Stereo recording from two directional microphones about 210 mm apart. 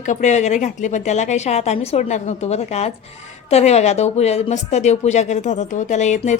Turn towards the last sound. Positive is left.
turn(degrees=35)  # may be behind; listen again after turning